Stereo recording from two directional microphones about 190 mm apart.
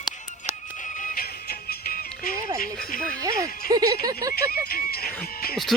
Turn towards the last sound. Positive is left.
turn(degrees=55)  # may be behind; listen again after turning